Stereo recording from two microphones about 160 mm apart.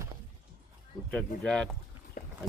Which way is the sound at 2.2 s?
65° left (ahead or behind).